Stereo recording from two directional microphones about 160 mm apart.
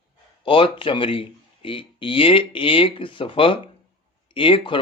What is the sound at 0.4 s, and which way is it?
Speech, 35° left (ahead or behind).